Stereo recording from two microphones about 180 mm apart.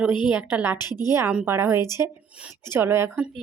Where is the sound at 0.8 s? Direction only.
20° left (ahead or behind).